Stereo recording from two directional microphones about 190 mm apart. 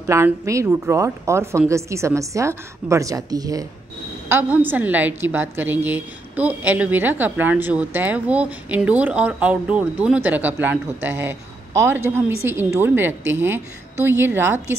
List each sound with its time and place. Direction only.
0.0 s a woman's voice: 15° right (ahead or behind)